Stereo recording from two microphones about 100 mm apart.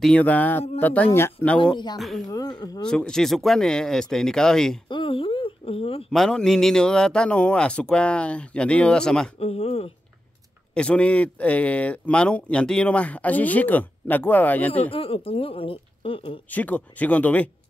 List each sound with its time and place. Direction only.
0.0 s a man's voice: 10° left (ahead or behind)
2.0 s speech: centre (ahead or behind)
2.2 s speech: 40° left (ahead or behind)
2.8 s speech: 5° left (ahead or behind)
4.8 s a sound: 55° left (ahead or behind)
6.1 s a man's voice: 5° left (ahead or behind)
9.4 s speech: 90° left
10.7 s a man's voice: 10° left (ahead or behind)
14.9 s speech: 70° left (ahead or behind)
16.4 s a man's voice: 15° left (ahead or behind)